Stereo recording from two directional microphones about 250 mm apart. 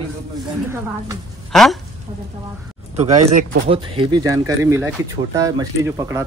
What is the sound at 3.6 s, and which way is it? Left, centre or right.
Speech, right.